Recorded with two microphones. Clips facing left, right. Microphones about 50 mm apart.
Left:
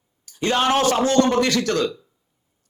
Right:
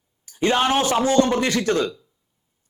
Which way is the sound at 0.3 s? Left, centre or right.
Centre.